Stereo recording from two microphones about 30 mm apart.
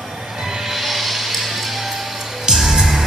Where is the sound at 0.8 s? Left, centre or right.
Centre.